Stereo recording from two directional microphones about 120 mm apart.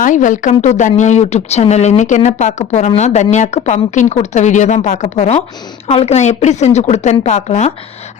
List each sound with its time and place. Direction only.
0.0 s a woman's voice: 90° left; by 7.7 s 70° left (ahead or behind)